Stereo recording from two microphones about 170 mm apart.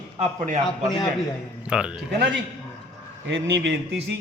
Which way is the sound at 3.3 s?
90° right.